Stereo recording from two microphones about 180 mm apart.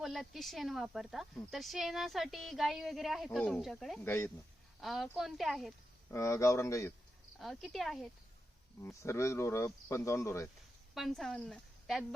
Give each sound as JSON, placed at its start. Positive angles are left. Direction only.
{"t": 0.0, "sound": "speech", "side_deg": 0}
{"t": 4.0, "sound": "speech", "side_deg": 15}
{"t": 4.8, "sound": "speech", "side_deg": 0}
{"t": 6.1, "sound": "speech", "side_deg": 15}
{"t": 7.3, "sound": "speech", "side_deg": 0}
{"t": 8.8, "sound": "speech", "side_deg": 15}
{"t": 10.9, "sound": "a woman's voice", "side_deg": 0}